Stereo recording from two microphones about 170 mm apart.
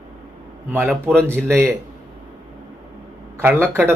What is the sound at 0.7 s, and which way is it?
A man's voice, 10° right (ahead or behind).